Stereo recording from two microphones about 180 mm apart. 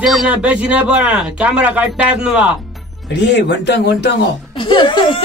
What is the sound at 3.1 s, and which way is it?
A man's voice, 70° left (ahead or behind).